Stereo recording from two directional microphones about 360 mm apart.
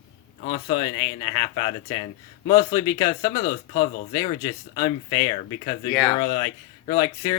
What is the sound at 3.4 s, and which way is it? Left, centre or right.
Speech, left.